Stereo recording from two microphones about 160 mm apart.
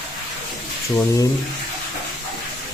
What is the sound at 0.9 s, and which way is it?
Speech, 20° left (ahead or behind).